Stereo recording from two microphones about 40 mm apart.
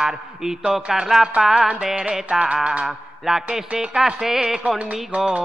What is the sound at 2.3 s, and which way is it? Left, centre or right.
Music, right.